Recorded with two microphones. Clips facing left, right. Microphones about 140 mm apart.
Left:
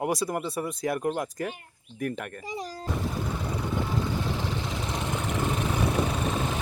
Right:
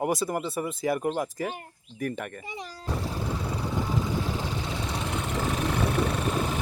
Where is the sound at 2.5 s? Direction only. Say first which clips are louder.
Left 4 dB; 40° left (ahead or behind).